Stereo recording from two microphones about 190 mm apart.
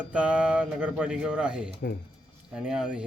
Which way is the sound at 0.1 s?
5° right (ahead or behind).